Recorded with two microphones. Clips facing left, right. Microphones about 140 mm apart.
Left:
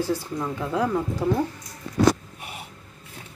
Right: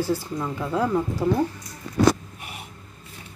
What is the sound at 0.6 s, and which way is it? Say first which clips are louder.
Speech: right 1 dB; 15° left (ahead or behind).